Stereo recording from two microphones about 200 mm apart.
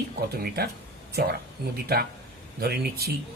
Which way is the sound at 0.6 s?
50° right (ahead or behind).